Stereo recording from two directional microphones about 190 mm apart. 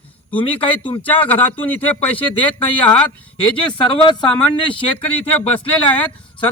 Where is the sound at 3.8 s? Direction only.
25° left (ahead or behind).